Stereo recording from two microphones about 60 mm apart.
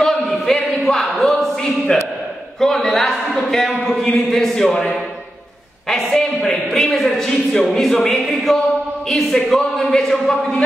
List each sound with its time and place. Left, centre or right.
0.0 s a sound: centre
4.1 s a woman's voice: centre
5.9 s a woman's voice: centre